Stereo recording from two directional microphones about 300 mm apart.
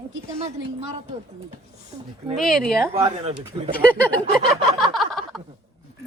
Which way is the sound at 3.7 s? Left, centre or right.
Centre.